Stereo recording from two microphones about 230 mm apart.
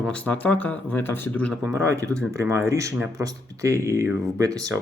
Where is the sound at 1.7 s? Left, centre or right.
Centre.